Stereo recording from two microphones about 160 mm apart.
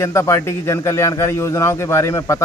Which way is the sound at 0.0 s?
20° left (ahead or behind).